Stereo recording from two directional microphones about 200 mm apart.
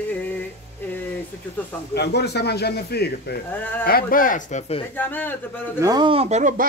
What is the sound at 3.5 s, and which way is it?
Speech, 10° left (ahead or behind).